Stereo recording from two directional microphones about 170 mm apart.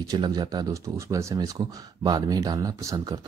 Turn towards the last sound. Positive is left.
turn(degrees=-20)  # may be behind; listen again after turning